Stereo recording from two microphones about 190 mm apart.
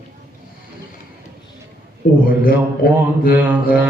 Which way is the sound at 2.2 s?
50° left (ahead or behind).